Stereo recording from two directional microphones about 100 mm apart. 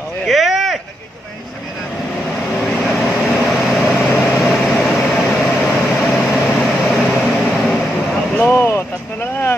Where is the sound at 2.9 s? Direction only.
5° right (ahead or behind).